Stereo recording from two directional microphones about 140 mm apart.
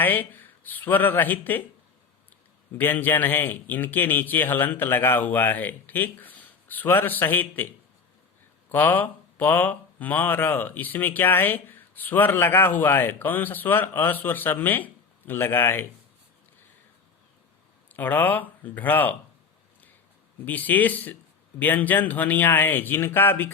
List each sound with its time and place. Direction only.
0.0 s speech: 15° left (ahead or behind)
2.7 s speech: 15° left (ahead or behind)
8.7 s speech: 10° left (ahead or behind)
17.8 s speech: 15° left (ahead or behind)
20.4 s speech: 10° left (ahead or behind)